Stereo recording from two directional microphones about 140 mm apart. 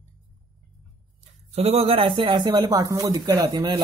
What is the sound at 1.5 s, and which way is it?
Speech, 50° right (ahead or behind).